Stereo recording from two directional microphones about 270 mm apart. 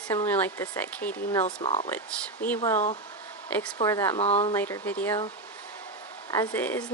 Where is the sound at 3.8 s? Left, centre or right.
Centre.